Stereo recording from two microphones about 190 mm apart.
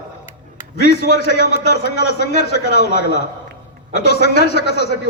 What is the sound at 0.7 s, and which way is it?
A man's voice, 60° left (ahead or behind).